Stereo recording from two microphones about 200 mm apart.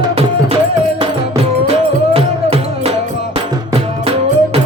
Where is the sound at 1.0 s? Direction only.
30° right (ahead or behind).